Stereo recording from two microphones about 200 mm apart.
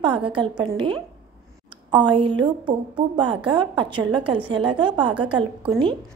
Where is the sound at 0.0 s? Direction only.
25° right (ahead or behind).